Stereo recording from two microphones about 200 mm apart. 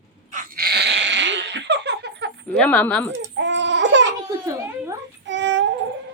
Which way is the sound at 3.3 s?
65° right (ahead or behind).